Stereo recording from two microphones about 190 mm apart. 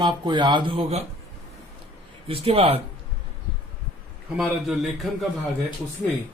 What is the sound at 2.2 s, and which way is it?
Speech, 30° right (ahead or behind).